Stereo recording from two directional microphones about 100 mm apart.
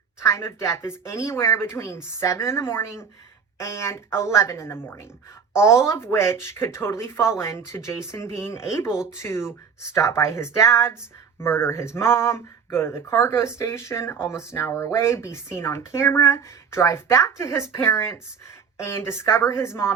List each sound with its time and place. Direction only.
0.2 s speech: 30° left (ahead or behind)
8.9 s speech: 5° right (ahead or behind)
9.1 s speech: 25° left (ahead or behind)